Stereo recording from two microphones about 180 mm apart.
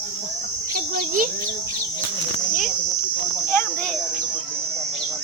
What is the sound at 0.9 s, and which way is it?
Speech, 50° right (ahead or behind).